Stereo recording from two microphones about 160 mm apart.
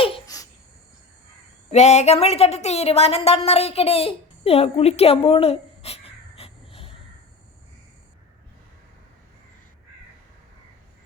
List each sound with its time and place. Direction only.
0.3 s babbling: 20° left (ahead or behind)
1.7 s speech: 45° left (ahead or behind)